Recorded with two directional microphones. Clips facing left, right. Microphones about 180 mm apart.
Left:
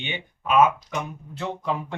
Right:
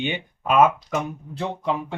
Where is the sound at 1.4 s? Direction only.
30° right (ahead or behind).